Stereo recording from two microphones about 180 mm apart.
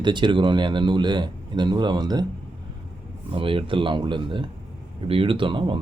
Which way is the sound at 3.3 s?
30° right (ahead or behind).